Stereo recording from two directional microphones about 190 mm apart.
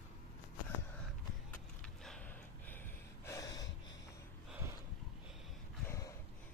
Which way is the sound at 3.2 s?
20° left (ahead or behind).